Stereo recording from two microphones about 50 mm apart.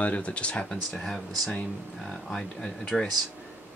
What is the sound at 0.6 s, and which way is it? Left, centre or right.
Speech, centre.